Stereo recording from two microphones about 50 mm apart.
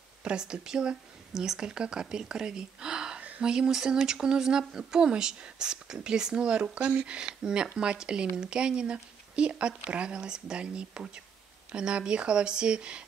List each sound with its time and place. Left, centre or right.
0.2 s speech: centre
3.2 s a sound: right
3.4 s speech: centre